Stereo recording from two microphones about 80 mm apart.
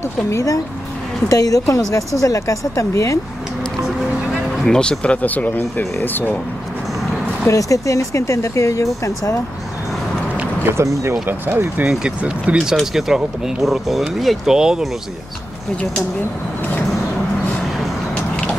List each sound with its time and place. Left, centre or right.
0.3 s speech: left
4.3 s speech: centre
7.4 s speech: left
10.3 s a sound: centre
10.7 s speech: right
11.2 s speech: right
11.8 s speech: centre
12.7 s speech: centre